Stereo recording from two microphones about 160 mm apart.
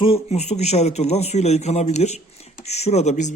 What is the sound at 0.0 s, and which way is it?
A man's voice, 40° left (ahead or behind).